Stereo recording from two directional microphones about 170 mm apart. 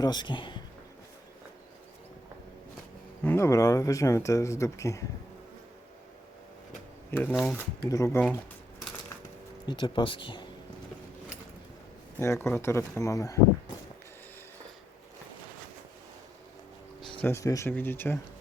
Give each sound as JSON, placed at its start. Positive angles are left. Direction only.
{"t": 0.0, "sound": "a man's voice", "side_deg": 25}
{"t": 3.2, "sound": "speech", "side_deg": 15}
{"t": 7.1, "sound": "speech", "side_deg": 10}
{"t": 9.6, "sound": "speech", "side_deg": 30}
{"t": 12.2, "sound": "speech", "side_deg": 15}
{"t": 17.2, "sound": "speech", "side_deg": 15}